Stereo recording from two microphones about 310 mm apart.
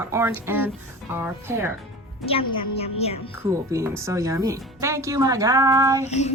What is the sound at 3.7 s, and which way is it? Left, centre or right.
Speech, centre.